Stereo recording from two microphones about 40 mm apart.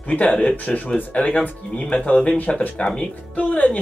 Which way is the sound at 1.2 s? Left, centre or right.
Left.